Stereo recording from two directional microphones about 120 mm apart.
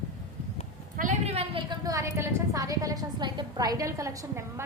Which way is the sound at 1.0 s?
60° right (ahead or behind).